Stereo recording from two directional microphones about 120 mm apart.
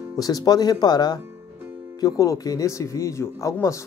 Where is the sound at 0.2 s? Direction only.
30° left (ahead or behind).